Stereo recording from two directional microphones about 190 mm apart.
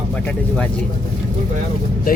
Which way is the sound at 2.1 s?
50° left (ahead or behind).